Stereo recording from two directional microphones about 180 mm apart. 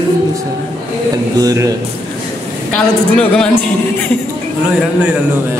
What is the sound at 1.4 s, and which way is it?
Speech, 20° right (ahead or behind).